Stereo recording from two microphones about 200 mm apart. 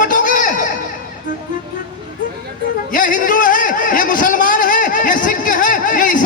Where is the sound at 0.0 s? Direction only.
40° left (ahead or behind).